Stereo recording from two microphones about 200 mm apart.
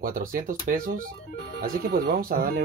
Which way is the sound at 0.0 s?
45° right (ahead or behind).